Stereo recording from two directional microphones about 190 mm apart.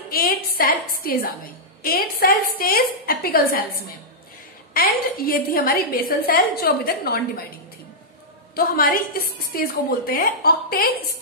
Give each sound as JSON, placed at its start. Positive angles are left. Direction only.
{"t": 0.1, "sound": "a woman's voice", "side_deg": 50}
{"t": 4.7, "sound": "a woman's voice", "side_deg": 50}
{"t": 8.5, "sound": "a woman's voice", "side_deg": 50}